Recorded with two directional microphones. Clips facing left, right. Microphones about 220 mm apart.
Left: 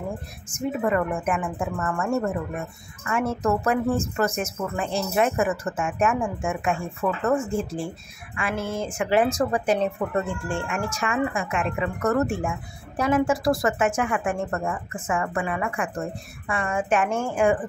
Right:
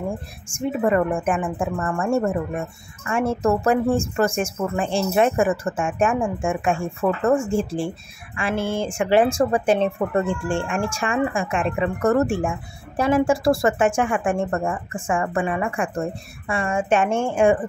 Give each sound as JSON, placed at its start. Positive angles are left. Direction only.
{"t": 0.5, "sound": "a woman's voice", "side_deg": -30}